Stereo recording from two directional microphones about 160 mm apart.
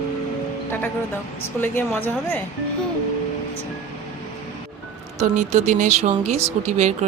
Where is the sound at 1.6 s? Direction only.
10° left (ahead or behind).